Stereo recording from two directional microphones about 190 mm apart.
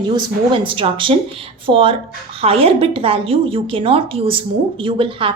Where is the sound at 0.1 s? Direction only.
25° right (ahead or behind).